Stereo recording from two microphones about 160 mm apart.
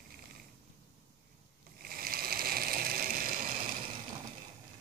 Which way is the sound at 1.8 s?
70° right (ahead or behind).